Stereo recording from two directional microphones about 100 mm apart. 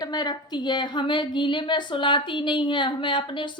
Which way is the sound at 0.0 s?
40° left (ahead or behind).